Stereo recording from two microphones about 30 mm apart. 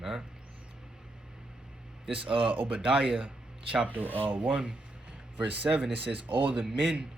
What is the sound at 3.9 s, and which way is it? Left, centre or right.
Speech, right.